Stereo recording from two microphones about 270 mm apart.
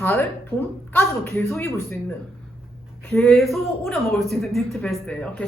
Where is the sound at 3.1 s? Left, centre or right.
Centre.